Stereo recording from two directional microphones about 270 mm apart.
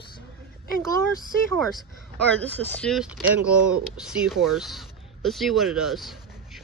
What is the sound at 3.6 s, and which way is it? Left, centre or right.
Speech, right.